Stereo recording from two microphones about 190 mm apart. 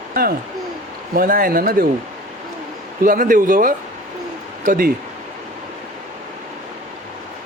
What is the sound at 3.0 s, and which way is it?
Speech, 45° right (ahead or behind).